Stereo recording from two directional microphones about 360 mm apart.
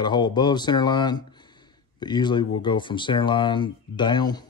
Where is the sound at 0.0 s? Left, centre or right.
Centre.